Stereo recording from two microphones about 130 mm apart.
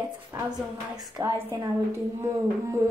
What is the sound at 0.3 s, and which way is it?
Music, 30° right (ahead or behind).